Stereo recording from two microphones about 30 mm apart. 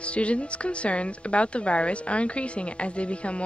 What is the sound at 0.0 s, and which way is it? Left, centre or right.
Speech, left.